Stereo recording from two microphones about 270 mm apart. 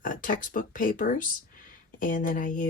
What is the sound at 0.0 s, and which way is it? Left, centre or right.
Speech, left.